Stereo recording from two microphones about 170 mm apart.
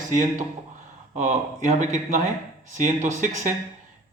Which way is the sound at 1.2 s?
45° right (ahead or behind).